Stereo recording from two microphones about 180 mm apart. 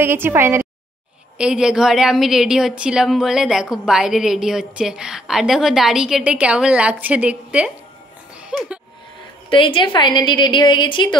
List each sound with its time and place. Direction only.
0.0 s a woman's voice: 10° right (ahead or behind)
8.4 s a sound: 5° right (ahead or behind)
9.5 s a woman's voice: 30° left (ahead or behind)